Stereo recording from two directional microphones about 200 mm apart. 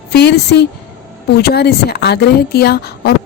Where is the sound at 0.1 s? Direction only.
55° left (ahead or behind).